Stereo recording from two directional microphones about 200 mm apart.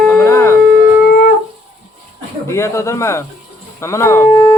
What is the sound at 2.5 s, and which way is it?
Speech, 15° left (ahead or behind).